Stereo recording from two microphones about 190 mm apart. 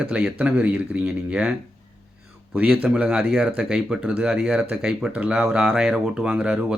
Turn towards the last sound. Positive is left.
turn(degrees=-5)  # may be behind; listen again after turning